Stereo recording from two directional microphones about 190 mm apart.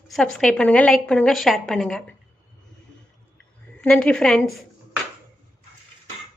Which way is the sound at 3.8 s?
5° left (ahead or behind).